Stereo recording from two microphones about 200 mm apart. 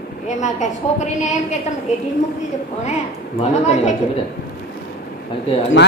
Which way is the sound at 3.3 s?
35° left (ahead or behind).